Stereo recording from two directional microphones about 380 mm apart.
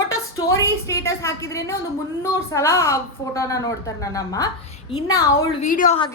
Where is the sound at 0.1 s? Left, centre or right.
Centre.